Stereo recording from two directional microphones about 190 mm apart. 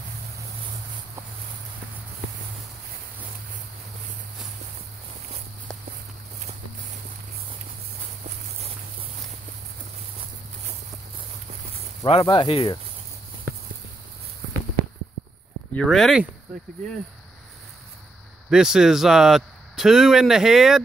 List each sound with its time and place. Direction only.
12.1 s speech: 25° left (ahead or behind)
15.7 s speech: 5° left (ahead or behind)
18.5 s speech: 5° right (ahead or behind)